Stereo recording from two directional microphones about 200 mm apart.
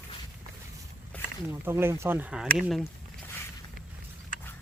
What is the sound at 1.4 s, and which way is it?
Speech, 10° right (ahead or behind).